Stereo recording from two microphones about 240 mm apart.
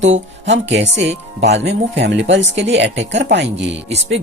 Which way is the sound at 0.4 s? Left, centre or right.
Right.